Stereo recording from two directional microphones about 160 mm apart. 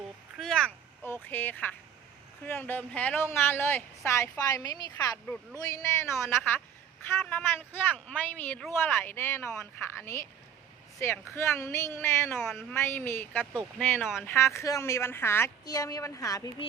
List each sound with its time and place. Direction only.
0.3 s a man's voice: 5° left (ahead or behind)
12.4 s speech: centre (ahead or behind)
12.7 s a man's voice: 15° left (ahead or behind)